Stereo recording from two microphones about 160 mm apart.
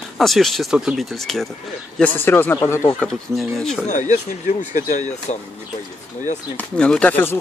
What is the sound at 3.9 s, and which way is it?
Speech, 50° left (ahead or behind).